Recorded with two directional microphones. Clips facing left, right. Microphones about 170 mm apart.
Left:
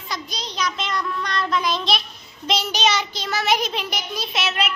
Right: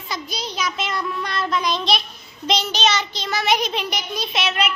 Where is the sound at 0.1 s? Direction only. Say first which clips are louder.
Right 2 dB; 5° right (ahead or behind).